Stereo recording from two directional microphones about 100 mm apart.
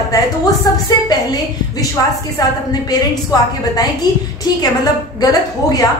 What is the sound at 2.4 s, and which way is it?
A woman's voice, 40° left (ahead or behind).